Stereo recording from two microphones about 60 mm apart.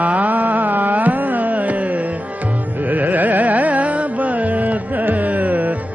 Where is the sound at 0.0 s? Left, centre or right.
Right.